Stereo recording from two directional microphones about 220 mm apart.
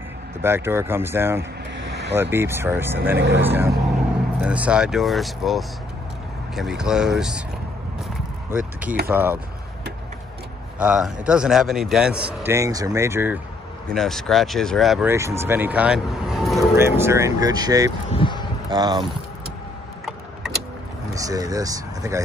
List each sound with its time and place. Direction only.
0.4 s speech: 10° right (ahead or behind)
1.9 s vehicle: 50° right (ahead or behind)
2.3 s speech: 10° right (ahead or behind)
3.2 s speech: 50° right (ahead or behind)
3.4 s speech: 10° right (ahead or behind)
8.5 s a sound: 5° right (ahead or behind)
9.0 s speech: 10° right (ahead or behind)
10.8 s speech: 5° right (ahead or behind)
13.8 s speech: centre (ahead or behind)
16.7 s speech: 10° right (ahead or behind)
18.1 s a sound: 20° left (ahead or behind)
18.7 s speech: 20° right (ahead or behind)
21.1 s speech: 15° right (ahead or behind)